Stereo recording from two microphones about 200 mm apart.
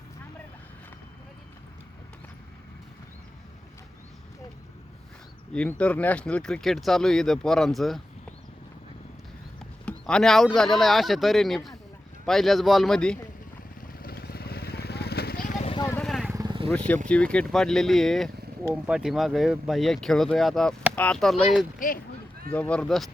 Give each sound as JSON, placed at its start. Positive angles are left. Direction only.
{"t": 5.5, "sound": "speech", "side_deg": 5}
{"t": 9.8, "sound": "speech", "side_deg": 5}
{"t": 13.8, "sound": "vehicle", "side_deg": 50}
{"t": 15.7, "sound": "vehicle", "side_deg": 20}
{"t": 16.0, "sound": "vehicle", "side_deg": 0}
{"t": 16.3, "sound": "vehicle", "side_deg": -20}
{"t": 16.6, "sound": "speech", "side_deg": 5}
{"t": 21.8, "sound": "speech", "side_deg": 40}
{"t": 22.5, "sound": "speech", "side_deg": 5}